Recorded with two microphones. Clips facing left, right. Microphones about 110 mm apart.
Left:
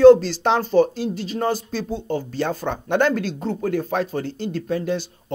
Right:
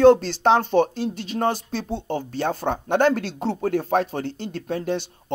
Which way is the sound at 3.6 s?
50° right (ahead or behind).